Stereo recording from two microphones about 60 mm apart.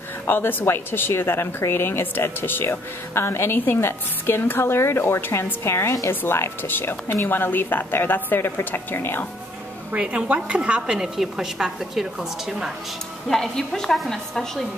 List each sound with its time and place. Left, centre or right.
0.3 s speech: left
9.9 s a woman's voice: centre
13.3 s a woman's voice: centre